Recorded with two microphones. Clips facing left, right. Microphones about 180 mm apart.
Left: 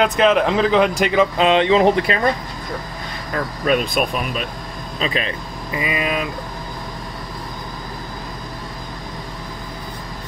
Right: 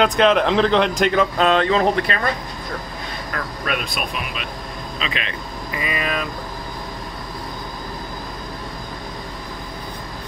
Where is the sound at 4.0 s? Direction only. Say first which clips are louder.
Left 6 dB; 45° left (ahead or behind).